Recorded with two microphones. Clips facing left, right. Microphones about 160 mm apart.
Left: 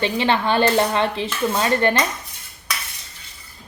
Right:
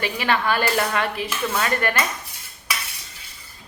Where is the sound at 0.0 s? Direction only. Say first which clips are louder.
Left 3 dB; 25° left (ahead or behind).